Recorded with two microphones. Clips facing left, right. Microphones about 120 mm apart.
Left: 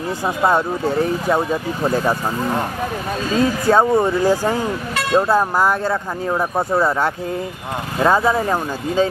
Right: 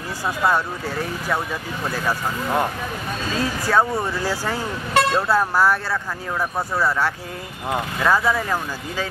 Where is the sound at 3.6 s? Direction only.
25° left (ahead or behind).